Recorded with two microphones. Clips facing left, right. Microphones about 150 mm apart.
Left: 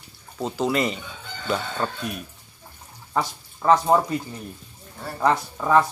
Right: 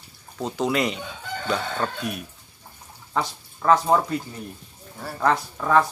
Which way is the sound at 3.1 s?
15° left (ahead or behind).